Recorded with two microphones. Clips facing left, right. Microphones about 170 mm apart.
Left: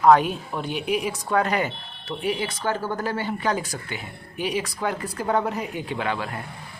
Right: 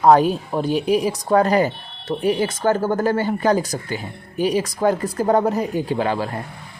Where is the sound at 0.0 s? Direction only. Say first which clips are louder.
Right 3 dB; 35° right (ahead or behind).